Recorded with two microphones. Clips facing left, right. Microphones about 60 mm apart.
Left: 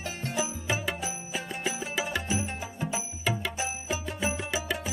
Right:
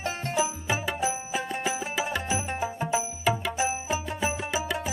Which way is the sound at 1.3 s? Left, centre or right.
Centre.